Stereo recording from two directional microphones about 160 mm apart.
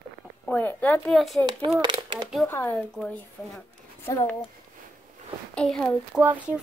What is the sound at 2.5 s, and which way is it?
Speech, 15° left (ahead or behind).